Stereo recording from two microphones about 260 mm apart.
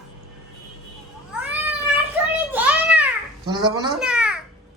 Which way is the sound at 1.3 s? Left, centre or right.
Centre.